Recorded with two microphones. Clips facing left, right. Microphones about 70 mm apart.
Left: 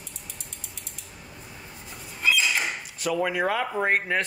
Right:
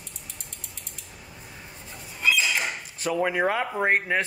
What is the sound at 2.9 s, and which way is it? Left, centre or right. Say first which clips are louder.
Speech: right 1 dB; right.